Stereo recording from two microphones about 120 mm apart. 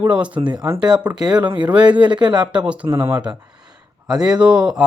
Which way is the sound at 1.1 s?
35° right (ahead or behind).